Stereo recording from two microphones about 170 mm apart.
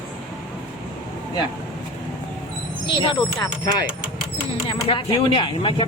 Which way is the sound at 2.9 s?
30° left (ahead or behind).